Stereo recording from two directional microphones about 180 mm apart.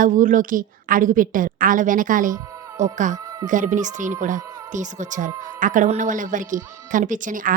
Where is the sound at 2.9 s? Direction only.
45° right (ahead or behind).